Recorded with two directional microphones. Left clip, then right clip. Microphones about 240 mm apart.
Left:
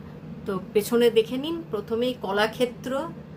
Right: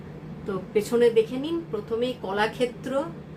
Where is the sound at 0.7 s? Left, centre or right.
Left.